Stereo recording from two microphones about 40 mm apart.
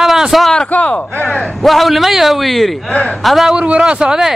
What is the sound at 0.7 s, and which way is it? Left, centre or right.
Speech, left.